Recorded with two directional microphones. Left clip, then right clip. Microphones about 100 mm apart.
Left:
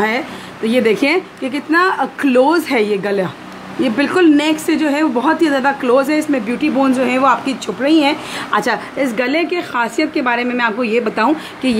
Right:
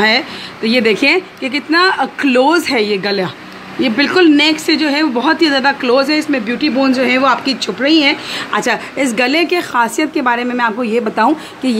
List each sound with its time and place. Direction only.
0.7 s a woman's voice: 5° right (ahead or behind)
8.9 s a woman's voice: 25° right (ahead or behind)